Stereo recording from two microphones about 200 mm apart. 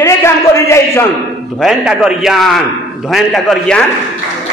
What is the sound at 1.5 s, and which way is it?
A man's voice, 5° right (ahead or behind).